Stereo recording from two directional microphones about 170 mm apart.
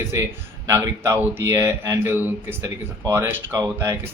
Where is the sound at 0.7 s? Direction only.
15° right (ahead or behind).